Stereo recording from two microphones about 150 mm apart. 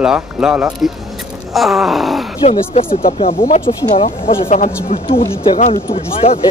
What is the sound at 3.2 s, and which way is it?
Speech, 40° left (ahead or behind).